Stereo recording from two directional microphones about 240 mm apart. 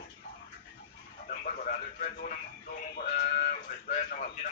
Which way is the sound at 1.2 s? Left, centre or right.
Left.